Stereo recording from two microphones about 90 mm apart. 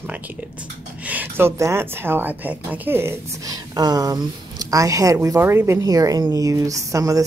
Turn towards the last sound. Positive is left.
turn(degrees=-40)  # may be behind; listen again after turning